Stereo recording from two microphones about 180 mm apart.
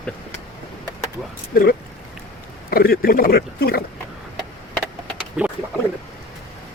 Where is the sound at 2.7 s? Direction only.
55° left (ahead or behind).